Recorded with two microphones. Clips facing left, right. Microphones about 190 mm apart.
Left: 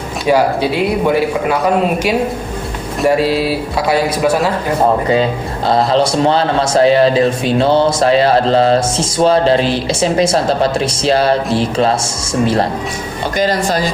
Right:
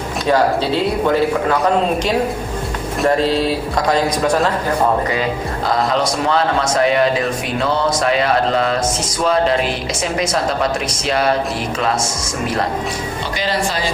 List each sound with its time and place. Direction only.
0.3 s speech: 10° left (ahead or behind)
3.0 s speech: 10° left (ahead or behind)
5.6 s a man's voice: 30° left (ahead or behind)
13.4 s speech: 45° left (ahead or behind)